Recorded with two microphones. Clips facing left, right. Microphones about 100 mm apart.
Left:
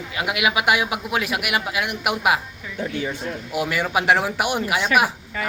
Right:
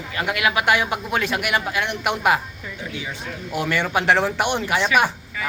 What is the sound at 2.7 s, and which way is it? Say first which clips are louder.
Speech: left 7 dB; 50° left (ahead or behind).